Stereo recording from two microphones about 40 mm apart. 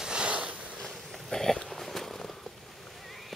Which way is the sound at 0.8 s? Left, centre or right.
Centre.